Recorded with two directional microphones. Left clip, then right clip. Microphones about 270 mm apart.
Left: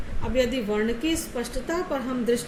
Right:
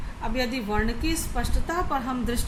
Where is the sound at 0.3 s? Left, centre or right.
Centre.